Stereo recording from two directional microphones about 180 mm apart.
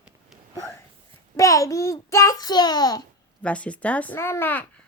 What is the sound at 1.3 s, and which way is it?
A child's voice, 20° left (ahead or behind).